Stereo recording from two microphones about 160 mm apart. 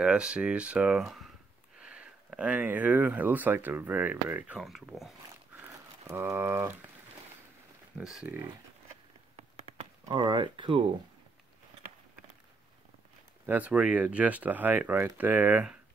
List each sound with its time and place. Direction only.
0.0 s speech: 5° right (ahead or behind)
5.6 s crumpling: 15° right (ahead or behind)
8.0 s speech: 5° right (ahead or behind)
9.4 s a sound: 40° right (ahead or behind)
10.0 s speech: 30° right (ahead or behind)
13.5 s speech: 10° right (ahead or behind)